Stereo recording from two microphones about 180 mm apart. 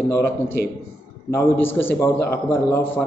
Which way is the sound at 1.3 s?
10° left (ahead or behind).